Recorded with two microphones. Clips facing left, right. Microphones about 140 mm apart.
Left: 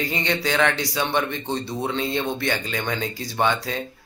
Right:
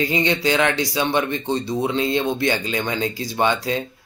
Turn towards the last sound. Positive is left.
turn(degrees=-15)  # may be behind; listen again after turning